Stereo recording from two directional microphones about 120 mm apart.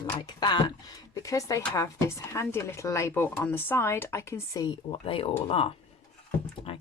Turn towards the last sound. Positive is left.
turn(degrees=45)  # may be behind; listen again after turning